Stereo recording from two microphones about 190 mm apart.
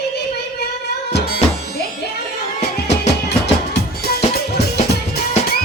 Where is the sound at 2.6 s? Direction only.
35° left (ahead or behind).